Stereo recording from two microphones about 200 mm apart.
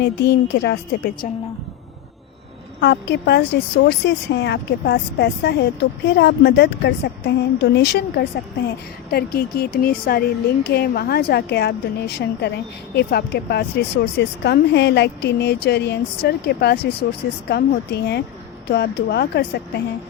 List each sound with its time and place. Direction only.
0.0 s speech: 55° left (ahead or behind)
2.8 s speech: 55° left (ahead or behind)